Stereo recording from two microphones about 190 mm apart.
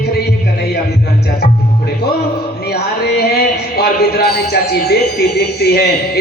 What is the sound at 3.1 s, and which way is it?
Music, 55° left (ahead or behind).